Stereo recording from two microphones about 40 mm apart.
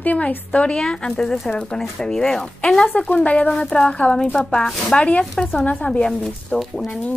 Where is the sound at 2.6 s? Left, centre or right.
Left.